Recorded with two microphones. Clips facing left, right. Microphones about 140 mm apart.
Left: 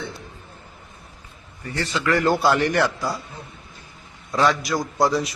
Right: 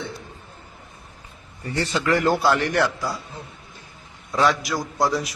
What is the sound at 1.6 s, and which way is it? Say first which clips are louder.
Speech: right 2 dB; 30° right (ahead or behind).